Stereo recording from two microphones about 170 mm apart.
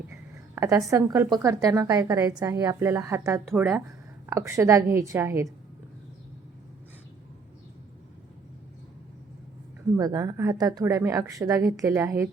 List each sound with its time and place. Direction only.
0.5 s a woman's voice: 15° right (ahead or behind)
10.0 s a woman's voice: 20° right (ahead or behind)